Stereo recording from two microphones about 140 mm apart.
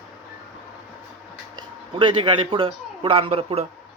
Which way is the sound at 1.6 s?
35° right (ahead or behind).